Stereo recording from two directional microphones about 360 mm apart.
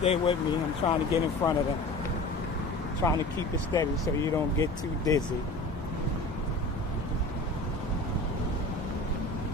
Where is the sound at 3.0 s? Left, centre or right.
Centre.